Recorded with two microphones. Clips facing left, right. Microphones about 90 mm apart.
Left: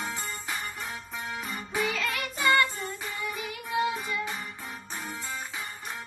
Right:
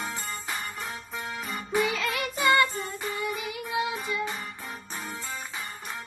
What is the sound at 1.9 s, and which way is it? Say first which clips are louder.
Music: right 2 dB; 15° right (ahead or behind).